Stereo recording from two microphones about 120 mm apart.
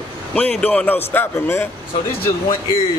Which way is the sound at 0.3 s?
10° left (ahead or behind).